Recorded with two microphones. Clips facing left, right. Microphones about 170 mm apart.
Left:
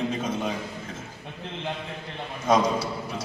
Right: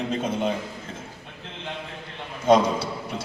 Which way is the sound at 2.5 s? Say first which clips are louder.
Right 3 dB; 30° right (ahead or behind).